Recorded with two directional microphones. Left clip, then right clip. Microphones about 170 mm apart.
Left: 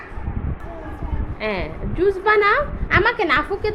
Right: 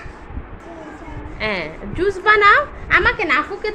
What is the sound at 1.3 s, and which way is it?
A woman's voice, 5° left (ahead or behind).